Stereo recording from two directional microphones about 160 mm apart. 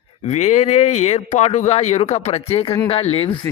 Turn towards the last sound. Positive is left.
turn(degrees=40)  # may be behind; listen again after turning